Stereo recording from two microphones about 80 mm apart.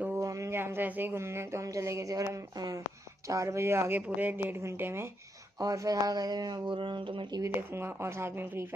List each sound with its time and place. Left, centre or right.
0.2 s speech: right
5.6 s speech: right
7.4 s speech: right